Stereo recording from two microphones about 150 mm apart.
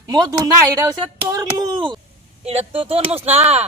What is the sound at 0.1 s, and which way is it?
Speech, 25° right (ahead or behind).